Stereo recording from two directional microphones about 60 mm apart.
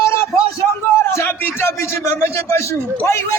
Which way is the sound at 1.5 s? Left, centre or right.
Left.